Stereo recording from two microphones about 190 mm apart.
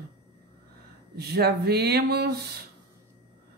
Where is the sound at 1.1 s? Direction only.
60° right (ahead or behind).